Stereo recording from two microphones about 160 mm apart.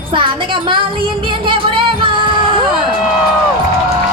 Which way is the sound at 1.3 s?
30° right (ahead or behind).